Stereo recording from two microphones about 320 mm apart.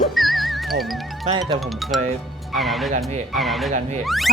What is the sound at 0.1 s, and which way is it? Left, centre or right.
Music, centre.